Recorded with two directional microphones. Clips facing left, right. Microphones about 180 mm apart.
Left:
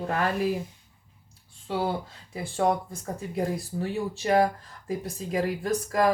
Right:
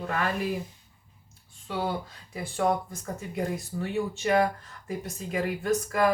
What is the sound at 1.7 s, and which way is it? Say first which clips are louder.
Speech: left 2 dB; 30° left (ahead or behind).